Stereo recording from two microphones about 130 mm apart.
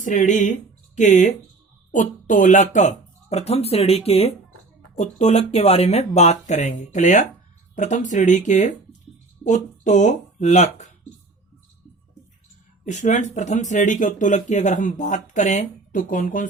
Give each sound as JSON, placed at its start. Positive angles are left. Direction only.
{"t": 0.0, "sound": "speech", "side_deg": 75}
{"t": 12.8, "sound": "speech", "side_deg": 65}